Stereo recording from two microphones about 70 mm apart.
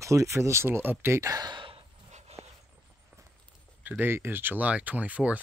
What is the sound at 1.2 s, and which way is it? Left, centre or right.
Speech, right.